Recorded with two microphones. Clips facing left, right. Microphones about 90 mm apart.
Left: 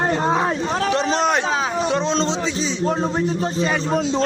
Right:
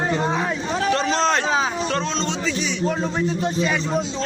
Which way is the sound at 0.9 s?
15° left (ahead or behind).